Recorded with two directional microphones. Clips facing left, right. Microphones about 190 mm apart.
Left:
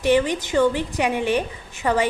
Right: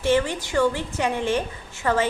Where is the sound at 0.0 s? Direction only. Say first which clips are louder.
Left 3 dB; 15° left (ahead or behind).